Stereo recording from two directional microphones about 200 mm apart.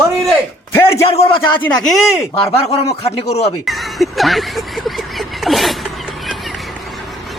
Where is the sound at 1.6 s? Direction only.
Centre (ahead or behind).